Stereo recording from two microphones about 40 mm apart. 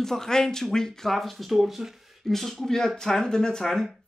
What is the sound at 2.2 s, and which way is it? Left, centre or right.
Speech, centre.